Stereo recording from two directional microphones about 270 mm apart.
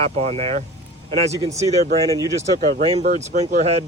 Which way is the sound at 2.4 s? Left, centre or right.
Right.